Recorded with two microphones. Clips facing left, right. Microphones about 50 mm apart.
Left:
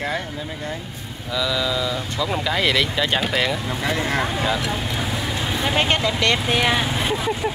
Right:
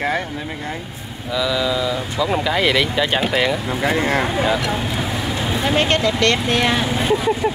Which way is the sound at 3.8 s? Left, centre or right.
Right.